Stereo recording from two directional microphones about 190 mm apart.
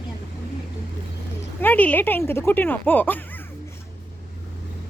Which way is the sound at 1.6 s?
10° left (ahead or behind).